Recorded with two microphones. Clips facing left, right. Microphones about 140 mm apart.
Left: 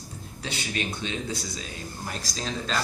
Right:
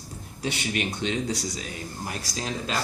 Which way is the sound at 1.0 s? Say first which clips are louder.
Right 4 dB; 70° right (ahead or behind).